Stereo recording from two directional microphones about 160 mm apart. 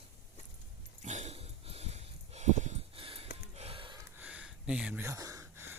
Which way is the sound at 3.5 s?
40° right (ahead or behind).